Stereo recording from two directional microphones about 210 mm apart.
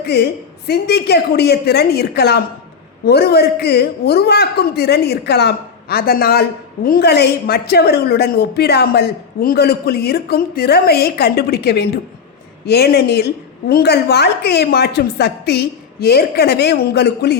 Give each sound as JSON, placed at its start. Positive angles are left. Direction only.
{"t": 0.0, "sound": "a woman's voice", "side_deg": 50}